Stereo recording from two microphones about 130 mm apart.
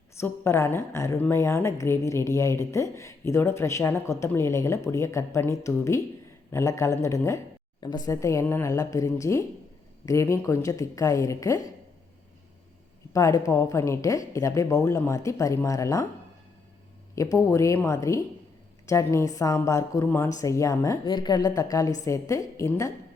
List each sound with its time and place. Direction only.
0.2 s speech: 20° left (ahead or behind)
13.1 s speech: 25° left (ahead or behind)
17.2 s speech: 25° left (ahead or behind)